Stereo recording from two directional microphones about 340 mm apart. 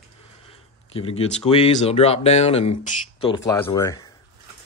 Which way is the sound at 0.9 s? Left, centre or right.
Centre.